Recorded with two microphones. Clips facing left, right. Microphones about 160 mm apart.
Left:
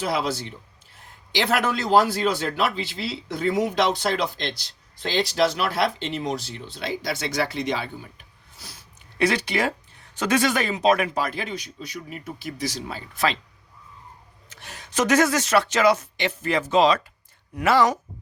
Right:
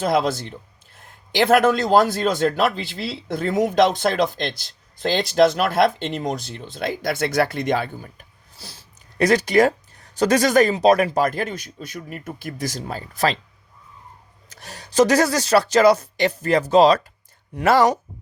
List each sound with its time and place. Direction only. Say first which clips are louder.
0.0 s a man's voice: right 5 dB; 50° right (ahead or behind)
8.5 s a sound: right 3 dB; 30° right (ahead or behind)
9.2 s a man's voice: right 7 dB; 45° right (ahead or behind)
14.5 s speech: right 8 dB; 35° right (ahead or behind)